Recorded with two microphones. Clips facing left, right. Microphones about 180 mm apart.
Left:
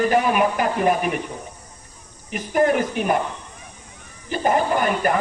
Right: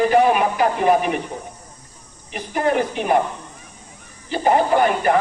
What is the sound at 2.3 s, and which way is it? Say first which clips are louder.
Speech: left 2 dB; 50° left (ahead or behind).